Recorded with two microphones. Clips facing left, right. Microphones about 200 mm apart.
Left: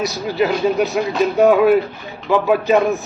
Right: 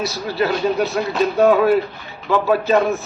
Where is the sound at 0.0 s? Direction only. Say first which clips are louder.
Left 2 dB; 15° left (ahead or behind).